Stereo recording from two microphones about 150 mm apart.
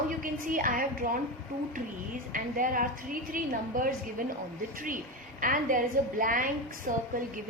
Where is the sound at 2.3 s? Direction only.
65° right (ahead or behind).